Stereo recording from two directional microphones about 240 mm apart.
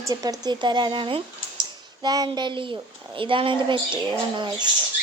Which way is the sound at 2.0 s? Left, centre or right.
Centre.